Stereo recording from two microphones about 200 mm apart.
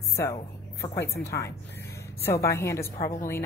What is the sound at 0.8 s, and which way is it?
A woman's voice, 15° left (ahead or behind).